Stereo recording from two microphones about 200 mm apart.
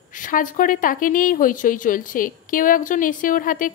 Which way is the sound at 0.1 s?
40° left (ahead or behind).